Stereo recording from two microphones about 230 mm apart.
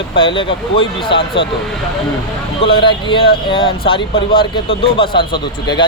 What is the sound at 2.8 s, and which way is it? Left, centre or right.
Speech, left.